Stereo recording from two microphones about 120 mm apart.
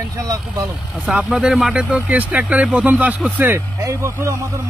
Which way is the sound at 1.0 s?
5° right (ahead or behind).